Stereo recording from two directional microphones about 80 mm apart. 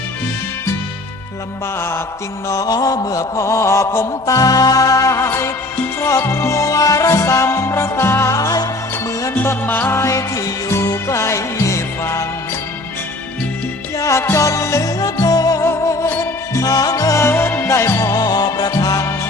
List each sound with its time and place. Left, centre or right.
2.5 s mantra: left
5.3 s music: left
5.7 s music: left
6.1 s music: left
8.4 s music: left
9.3 s music: left
13.9 s music: left
15.6 s music: left
16.6 s music: left